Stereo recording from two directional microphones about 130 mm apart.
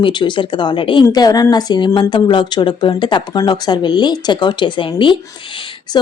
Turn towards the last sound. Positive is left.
turn(degrees=40)  # may be behind; listen again after turning